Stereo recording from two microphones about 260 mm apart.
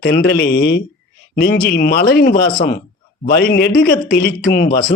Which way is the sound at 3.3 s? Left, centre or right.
Left.